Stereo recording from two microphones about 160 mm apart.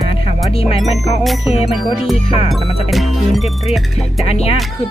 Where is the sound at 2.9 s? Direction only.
Centre (ahead or behind).